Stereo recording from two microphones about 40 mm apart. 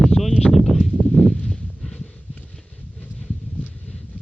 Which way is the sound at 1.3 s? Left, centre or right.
Left.